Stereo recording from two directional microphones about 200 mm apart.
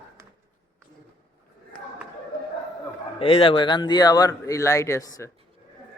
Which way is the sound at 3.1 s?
25° left (ahead or behind).